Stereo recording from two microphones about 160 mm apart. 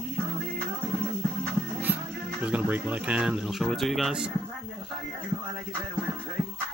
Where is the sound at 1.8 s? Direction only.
10° right (ahead or behind).